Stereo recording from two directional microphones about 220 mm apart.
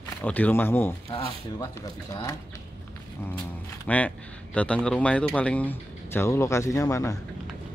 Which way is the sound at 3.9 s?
5° left (ahead or behind).